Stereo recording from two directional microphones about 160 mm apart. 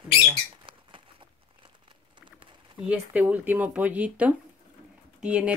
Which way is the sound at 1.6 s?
30° right (ahead or behind).